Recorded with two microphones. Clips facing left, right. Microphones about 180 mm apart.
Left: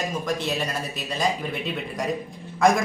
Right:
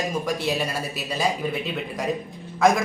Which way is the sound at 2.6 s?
Centre (ahead or behind).